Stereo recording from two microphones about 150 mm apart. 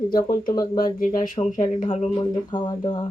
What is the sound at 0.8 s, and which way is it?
Speech, 65° left (ahead or behind).